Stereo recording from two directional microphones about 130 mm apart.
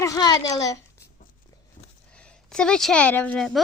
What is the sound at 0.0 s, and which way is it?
Speech, 30° left (ahead or behind).